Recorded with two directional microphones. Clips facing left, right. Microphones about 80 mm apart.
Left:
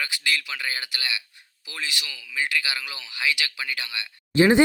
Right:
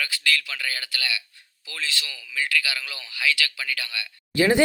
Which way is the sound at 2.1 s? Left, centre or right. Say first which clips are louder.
Even; centre.